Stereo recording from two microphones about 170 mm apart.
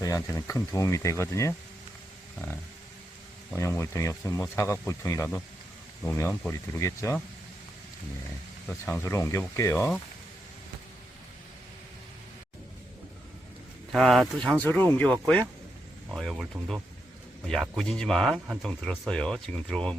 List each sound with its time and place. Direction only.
0.0 s speech: 20° left (ahead or behind)
3.5 s speech: 15° left (ahead or behind)
8.8 s speech: 15° left (ahead or behind)
13.9 s speech: centre (ahead or behind)